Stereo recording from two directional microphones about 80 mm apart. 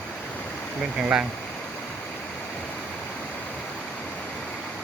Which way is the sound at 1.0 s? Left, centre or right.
Centre.